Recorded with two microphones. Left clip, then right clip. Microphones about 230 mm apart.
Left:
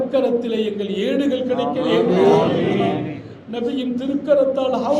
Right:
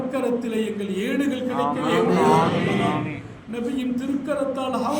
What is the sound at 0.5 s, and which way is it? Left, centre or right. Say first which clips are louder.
Speech: left 4 dB; centre.